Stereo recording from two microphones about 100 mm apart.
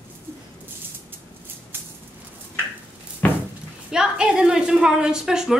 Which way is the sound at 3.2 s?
15° left (ahead or behind).